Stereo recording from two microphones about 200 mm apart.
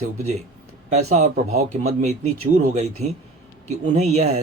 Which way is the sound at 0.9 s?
35° right (ahead or behind).